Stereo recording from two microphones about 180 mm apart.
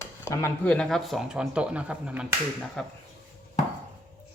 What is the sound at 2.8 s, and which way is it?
Speech, 5° left (ahead or behind).